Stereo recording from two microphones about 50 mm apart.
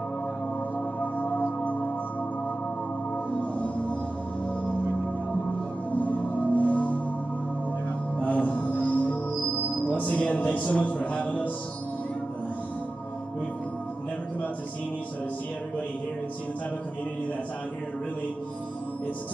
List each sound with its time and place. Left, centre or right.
1.1 s singing bowl: left
5.9 s music: left
8.2 s music: left
9.9 s speech: left